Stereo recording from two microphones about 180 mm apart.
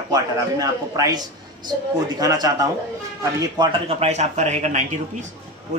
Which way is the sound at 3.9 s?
35° right (ahead or behind).